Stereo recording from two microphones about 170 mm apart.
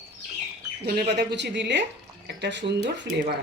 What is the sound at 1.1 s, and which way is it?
Speech, 85° right.